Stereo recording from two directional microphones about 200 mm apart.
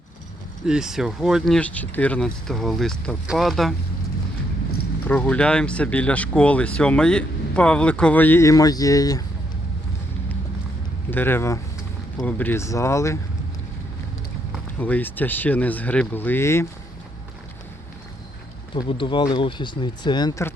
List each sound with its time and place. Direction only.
0.6 s speech: centre (ahead or behind)
5.0 s speech: 10° left (ahead or behind)
11.1 s speech: 10° left (ahead or behind)
14.8 s speech: 10° left (ahead or behind)
18.7 s speech: 25° left (ahead or behind)